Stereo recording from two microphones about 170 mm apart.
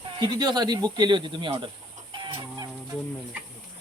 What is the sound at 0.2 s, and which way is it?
Speech, 25° right (ahead or behind).